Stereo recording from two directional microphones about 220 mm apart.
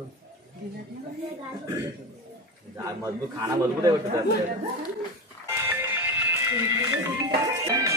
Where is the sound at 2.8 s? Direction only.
15° right (ahead or behind).